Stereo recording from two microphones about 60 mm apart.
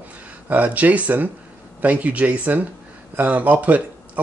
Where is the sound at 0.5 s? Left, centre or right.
Right.